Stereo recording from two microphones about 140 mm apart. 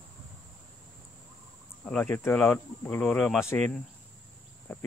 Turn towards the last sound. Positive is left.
turn(degrees=15)  # may be behind; listen again after turning